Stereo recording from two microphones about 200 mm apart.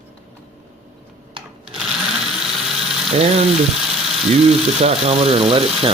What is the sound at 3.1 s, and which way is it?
Speech, 30° right (ahead or behind).